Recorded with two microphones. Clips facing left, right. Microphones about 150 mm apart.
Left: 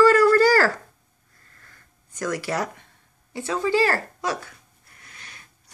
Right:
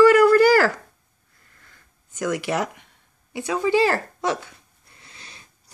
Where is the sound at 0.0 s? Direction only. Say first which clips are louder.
Right 2 dB; 15° right (ahead or behind).